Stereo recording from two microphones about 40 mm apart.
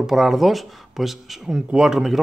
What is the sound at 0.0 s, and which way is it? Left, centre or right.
A man's voice, centre.